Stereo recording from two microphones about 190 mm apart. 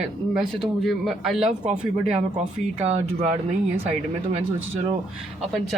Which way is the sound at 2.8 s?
35° right (ahead or behind).